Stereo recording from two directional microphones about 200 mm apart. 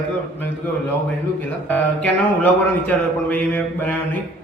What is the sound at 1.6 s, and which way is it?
A man's voice, 10° left (ahead or behind).